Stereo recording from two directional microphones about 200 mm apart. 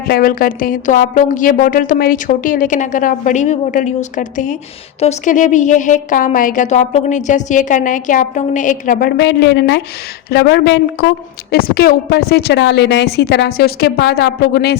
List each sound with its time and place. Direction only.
0.1 s a woman's voice: 45° left (ahead or behind)